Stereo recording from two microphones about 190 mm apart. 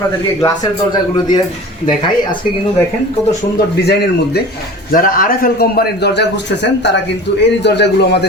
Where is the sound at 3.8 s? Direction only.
60° left (ahead or behind).